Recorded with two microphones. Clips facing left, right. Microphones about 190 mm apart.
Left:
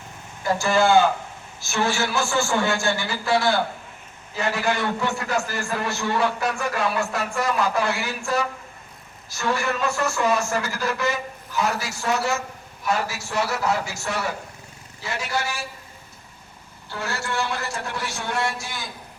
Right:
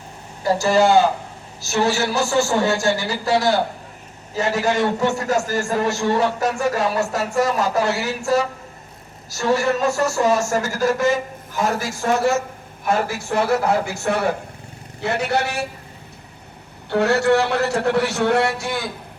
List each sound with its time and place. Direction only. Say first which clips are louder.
0.4 s a man's voice: right 4 dB; 35° right (ahead or behind); by 15.6 s 65° right (ahead or behind)
16.9 s a man's voice: right 13 dB; 65° right (ahead or behind)